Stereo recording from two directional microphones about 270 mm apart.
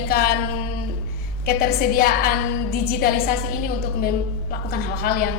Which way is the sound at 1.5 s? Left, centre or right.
Left.